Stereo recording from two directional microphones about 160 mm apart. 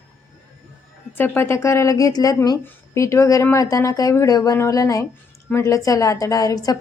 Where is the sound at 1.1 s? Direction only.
10° left (ahead or behind).